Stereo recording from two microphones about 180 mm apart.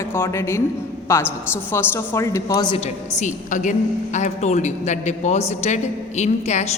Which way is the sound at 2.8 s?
40° left (ahead or behind).